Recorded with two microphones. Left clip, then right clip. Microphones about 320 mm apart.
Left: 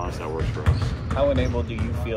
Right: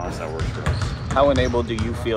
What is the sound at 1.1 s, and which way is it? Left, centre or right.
Speech, right.